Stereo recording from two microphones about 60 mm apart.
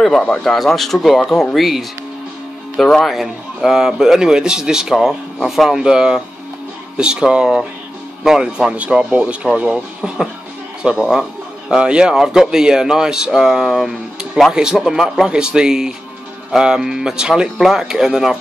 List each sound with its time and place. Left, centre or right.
0.4 s speech: centre
3.2 s a man's voice: centre